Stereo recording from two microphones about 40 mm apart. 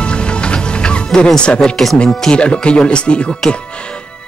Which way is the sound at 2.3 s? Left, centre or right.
Left.